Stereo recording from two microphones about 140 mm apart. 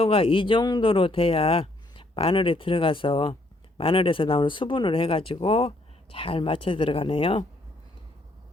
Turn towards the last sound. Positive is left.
turn(degrees=40)  # may be behind; listen again after turning